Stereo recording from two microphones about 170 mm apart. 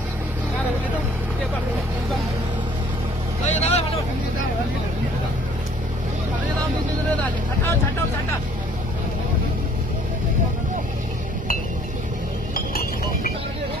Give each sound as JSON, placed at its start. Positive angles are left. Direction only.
{"t": 3.4, "sound": "vehicle", "side_deg": 45}
{"t": 12.5, "sound": "chink", "side_deg": 60}